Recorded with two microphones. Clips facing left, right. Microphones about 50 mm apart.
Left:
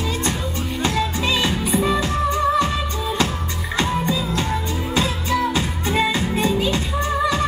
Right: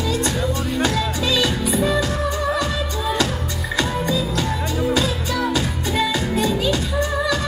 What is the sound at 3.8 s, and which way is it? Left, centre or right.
Music, left.